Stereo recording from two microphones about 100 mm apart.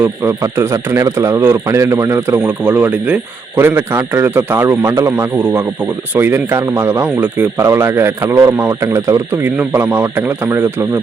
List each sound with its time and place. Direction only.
0.0 s speech: 25° right (ahead or behind)
2.4 s speech: 15° right (ahead or behind); by 9.2 s 35° right (ahead or behind)
9.3 s speech: 20° right (ahead or behind)